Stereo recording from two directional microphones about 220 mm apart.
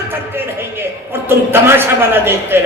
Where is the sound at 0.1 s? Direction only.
10° right (ahead or behind).